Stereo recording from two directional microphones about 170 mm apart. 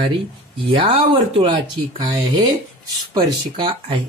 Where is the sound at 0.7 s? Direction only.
30° right (ahead or behind).